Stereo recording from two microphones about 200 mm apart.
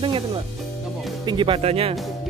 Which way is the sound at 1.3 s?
25° right (ahead or behind).